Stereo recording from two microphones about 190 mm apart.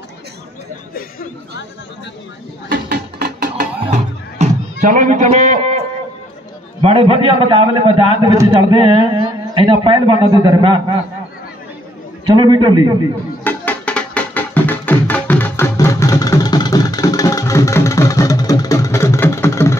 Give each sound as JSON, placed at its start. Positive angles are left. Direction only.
{"t": 2.7, "sound": "music", "side_deg": -50}
{"t": 4.8, "sound": "a man's voice", "side_deg": -45}
{"t": 12.4, "sound": "a man's voice", "side_deg": -20}
{"t": 13.4, "sound": "music", "side_deg": 10}